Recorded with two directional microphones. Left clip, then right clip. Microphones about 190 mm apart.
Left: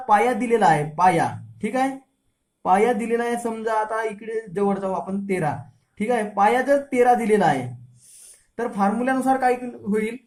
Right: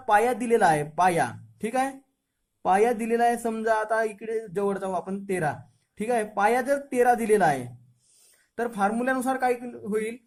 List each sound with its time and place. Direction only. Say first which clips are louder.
0.0 s speech: left 3 dB; 40° right (ahead or behind)